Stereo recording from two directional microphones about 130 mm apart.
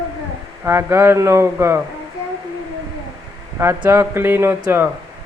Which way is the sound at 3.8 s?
20° right (ahead or behind).